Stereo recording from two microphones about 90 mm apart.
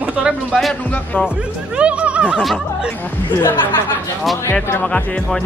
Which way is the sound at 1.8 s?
15° right (ahead or behind).